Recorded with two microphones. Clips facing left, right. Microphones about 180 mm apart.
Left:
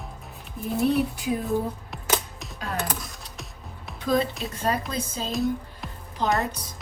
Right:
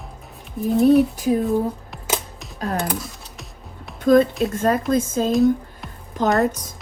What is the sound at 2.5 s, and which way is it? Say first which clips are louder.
Computer keyboard: right 6 dB; 50° right (ahead or behind).